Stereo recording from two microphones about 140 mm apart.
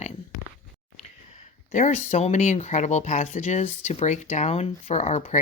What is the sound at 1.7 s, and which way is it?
Speech, 60° left (ahead or behind).